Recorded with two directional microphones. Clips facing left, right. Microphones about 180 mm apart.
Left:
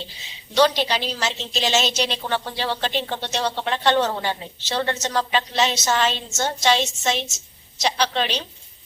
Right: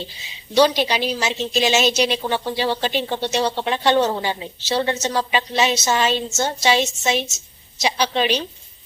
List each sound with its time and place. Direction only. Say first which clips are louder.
0.5 s a woman's voice: right 2 dB; 10° right (ahead or behind)